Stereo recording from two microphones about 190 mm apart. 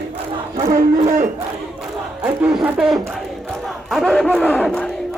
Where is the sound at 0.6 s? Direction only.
35° right (ahead or behind).